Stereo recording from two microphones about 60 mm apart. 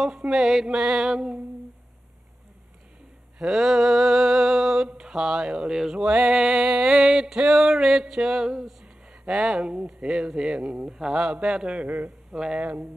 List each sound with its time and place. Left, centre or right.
0.0 s mantra: centre
3.3 s a sound: centre
8.8 s a man's voice: centre